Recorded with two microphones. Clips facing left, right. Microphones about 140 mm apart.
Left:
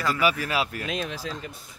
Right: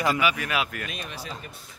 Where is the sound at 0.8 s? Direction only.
90° left.